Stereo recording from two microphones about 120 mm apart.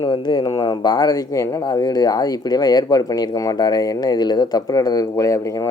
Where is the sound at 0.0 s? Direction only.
40° left (ahead or behind).